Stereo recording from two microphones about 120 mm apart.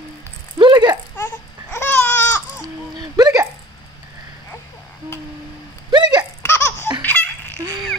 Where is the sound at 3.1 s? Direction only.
30° right (ahead or behind).